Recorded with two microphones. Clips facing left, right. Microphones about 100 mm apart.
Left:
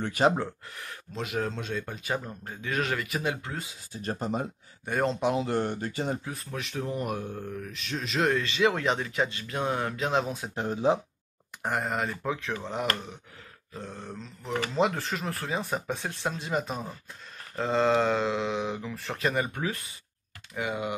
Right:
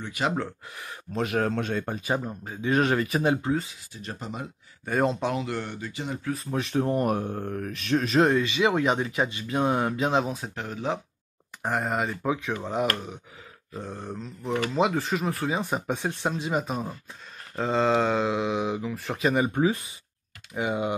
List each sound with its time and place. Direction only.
1.1 s speech: 55° right (ahead or behind)
2.0 s speech: 20° right (ahead or behind)
2.6 s speech: 30° right (ahead or behind)
3.9 s speech: 40° left (ahead or behind)
4.8 s speech: 5° right (ahead or behind)
5.4 s speech: 40° left (ahead or behind)
6.5 s speech: 30° right (ahead or behind)
6.9 s speech: 45° right (ahead or behind)
8.4 s speech: 10° right (ahead or behind)
10.1 s speech: centre (ahead or behind)
10.5 s speech: 20° left (ahead or behind)
11.6 s speech: centre (ahead or behind)
13.7 s speech: 15° right (ahead or behind)